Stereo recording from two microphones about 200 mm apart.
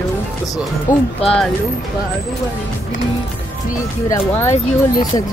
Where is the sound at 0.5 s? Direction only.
25° left (ahead or behind).